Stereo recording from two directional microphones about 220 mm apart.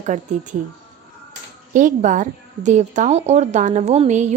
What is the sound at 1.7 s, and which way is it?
A woman's voice, 35° right (ahead or behind).